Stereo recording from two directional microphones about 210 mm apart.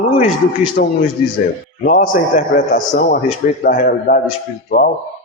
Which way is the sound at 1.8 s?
40° left (ahead or behind).